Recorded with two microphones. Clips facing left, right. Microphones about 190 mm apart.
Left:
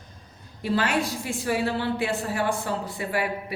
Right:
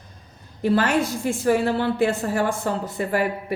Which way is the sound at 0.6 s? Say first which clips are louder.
Right 5 dB; 45° right (ahead or behind).